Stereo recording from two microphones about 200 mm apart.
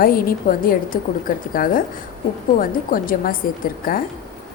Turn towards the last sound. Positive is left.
turn(degrees=45)  # may be behind; listen again after turning